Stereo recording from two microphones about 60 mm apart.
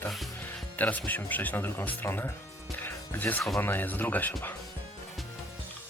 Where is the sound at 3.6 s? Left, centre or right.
Left.